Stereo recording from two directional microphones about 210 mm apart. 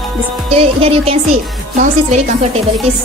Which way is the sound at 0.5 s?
30° right (ahead or behind).